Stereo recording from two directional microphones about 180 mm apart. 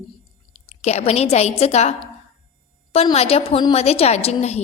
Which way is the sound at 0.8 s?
35° left (ahead or behind).